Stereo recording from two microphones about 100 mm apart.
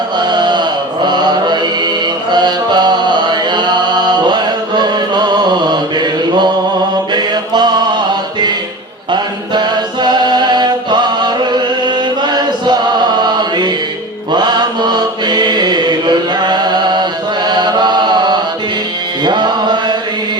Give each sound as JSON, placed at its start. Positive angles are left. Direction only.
{"t": 0.2, "sound": "mantra", "side_deg": -45}
{"t": 2.3, "sound": "music", "side_deg": -45}
{"t": 4.3, "sound": "chant", "side_deg": -50}
{"t": 7.1, "sound": "mantra", "side_deg": -45}
{"t": 9.1, "sound": "chant", "side_deg": -45}
{"t": 19.2, "sound": "mantra", "side_deg": -50}